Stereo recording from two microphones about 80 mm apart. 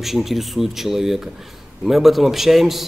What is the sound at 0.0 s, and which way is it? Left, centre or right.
A man's voice, centre.